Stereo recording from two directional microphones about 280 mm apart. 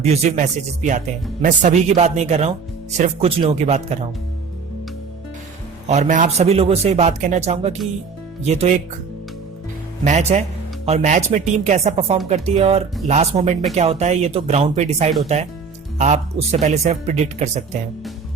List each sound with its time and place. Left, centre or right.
0.0 s speech: right
5.9 s speech: right
10.0 s speech: right